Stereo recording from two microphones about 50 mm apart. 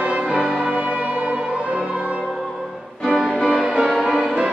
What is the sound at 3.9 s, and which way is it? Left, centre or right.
Music, centre.